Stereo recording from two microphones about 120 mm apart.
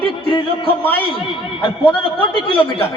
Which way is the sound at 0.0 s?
45° left (ahead or behind).